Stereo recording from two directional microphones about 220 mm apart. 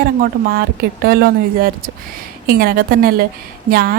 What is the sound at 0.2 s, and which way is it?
Speech, 45° right (ahead or behind).